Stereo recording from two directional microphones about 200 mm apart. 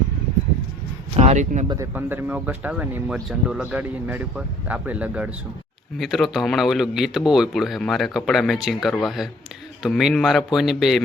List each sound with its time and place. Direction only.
1.1 s speech: 35° right (ahead or behind)
1.6 s speech: 20° right (ahead or behind); by 11.0 s centre (ahead or behind)